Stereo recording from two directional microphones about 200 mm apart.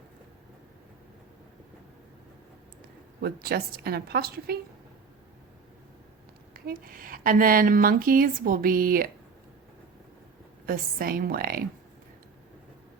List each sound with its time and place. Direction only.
3.2 s speech: 50° right (ahead or behind)
6.5 s speech: 45° right (ahead or behind)
10.7 s speech: 45° right (ahead or behind)